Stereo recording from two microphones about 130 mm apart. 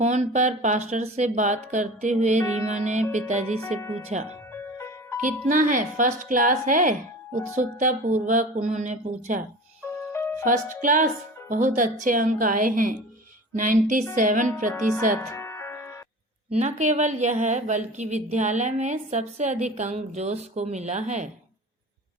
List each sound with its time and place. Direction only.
0.0 s a woman's voice: 65° right (ahead or behind)
4.5 s music: 20° left (ahead or behind)
5.5 s a woman's voice: 90° right; by 9.4 s 70° right (ahead or behind)
10.1 s music: 20° left (ahead or behind)
10.4 s a woman's voice: 75° right (ahead or behind)
15.2 s music: 20° left (ahead or behind)
16.6 s a woman's voice: 65° right (ahead or behind)